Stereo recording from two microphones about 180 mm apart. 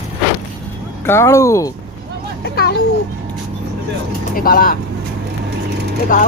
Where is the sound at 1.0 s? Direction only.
15° left (ahead or behind).